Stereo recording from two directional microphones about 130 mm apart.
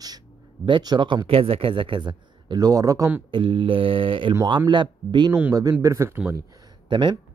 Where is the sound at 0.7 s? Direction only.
35° right (ahead or behind).